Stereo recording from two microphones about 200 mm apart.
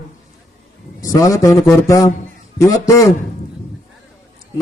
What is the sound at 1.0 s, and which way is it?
A man's voice, 15° left (ahead or behind).